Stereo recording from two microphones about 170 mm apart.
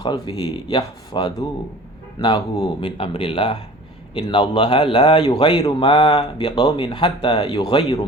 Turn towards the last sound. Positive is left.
turn(degrees=30)  # may be behind; listen again after turning